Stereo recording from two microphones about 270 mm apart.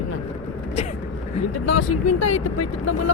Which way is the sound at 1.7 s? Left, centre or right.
Left.